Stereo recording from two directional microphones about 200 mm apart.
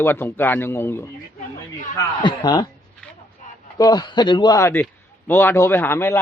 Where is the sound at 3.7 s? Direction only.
20° left (ahead or behind).